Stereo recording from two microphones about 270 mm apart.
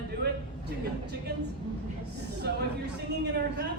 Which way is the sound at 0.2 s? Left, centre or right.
Right.